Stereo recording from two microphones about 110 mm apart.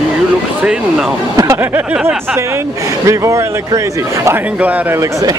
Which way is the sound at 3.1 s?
30° right (ahead or behind).